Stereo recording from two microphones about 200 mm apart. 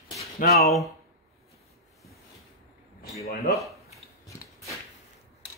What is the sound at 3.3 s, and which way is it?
Speech, 50° left (ahead or behind).